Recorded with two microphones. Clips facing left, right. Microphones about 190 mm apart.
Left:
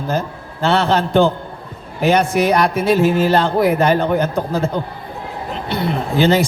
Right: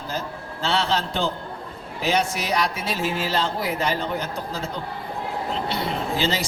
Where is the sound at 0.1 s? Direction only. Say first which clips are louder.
Left 8 dB; 55° left (ahead or behind).